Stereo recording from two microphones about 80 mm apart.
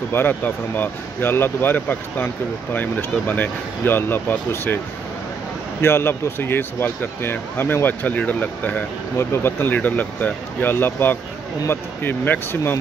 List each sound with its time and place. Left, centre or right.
0.1 s speech: left
5.8 s speech: left